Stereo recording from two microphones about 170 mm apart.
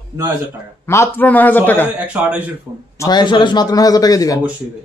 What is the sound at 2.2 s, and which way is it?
Speech, 5° right (ahead or behind).